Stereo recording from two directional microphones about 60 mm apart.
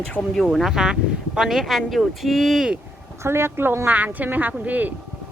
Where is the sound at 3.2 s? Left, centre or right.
Right.